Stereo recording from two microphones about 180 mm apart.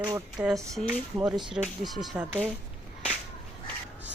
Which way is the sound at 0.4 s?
Centre (ahead or behind).